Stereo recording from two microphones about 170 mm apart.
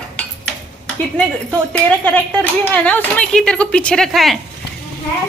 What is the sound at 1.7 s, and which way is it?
A woman's voice, 5° left (ahead or behind).